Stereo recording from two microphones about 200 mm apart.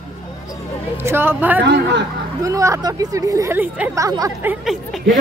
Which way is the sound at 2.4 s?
15° right (ahead or behind).